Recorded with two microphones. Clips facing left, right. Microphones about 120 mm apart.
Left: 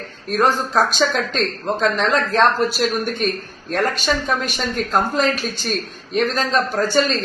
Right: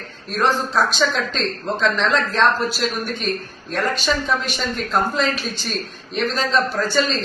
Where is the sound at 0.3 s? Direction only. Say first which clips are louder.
Left 2 dB; 45° left (ahead or behind).